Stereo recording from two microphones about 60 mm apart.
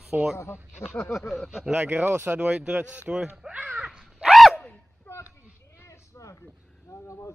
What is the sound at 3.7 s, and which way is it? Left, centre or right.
Dog, centre.